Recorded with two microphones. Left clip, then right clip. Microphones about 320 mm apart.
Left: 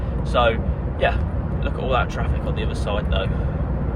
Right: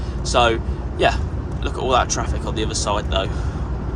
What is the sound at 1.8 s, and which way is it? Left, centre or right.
Speech, centre.